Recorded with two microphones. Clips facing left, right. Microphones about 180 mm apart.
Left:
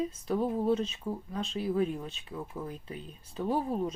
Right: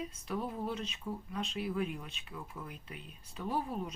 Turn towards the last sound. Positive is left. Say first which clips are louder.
# left 6 dB
turn(degrees=30)  # may be behind; listen again after turning